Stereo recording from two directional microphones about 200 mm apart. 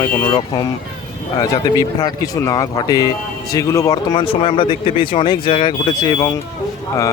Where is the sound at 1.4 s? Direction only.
20° left (ahead or behind).